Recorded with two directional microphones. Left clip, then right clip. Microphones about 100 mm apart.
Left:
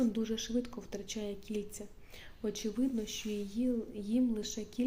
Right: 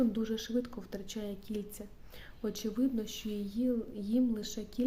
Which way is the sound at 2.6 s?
30° right (ahead or behind).